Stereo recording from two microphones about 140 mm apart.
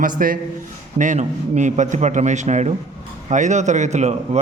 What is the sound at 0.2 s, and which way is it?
Speech, 90° right.